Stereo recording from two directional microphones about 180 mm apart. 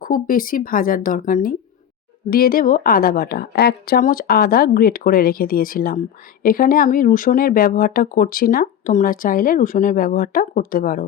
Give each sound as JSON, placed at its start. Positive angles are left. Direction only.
{"t": 0.0, "sound": "a woman's voice", "side_deg": 50}